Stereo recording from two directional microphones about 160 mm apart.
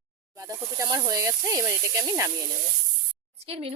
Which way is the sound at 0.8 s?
20° right (ahead or behind).